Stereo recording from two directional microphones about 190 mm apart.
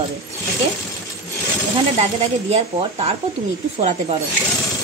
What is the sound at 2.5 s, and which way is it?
Speech, 35° right (ahead or behind).